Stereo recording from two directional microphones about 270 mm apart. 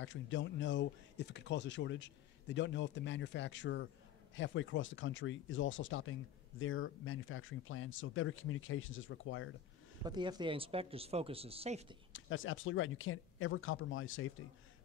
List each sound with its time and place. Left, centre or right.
0.0 s speech: left
10.0 s speech: centre
12.1 s speech: left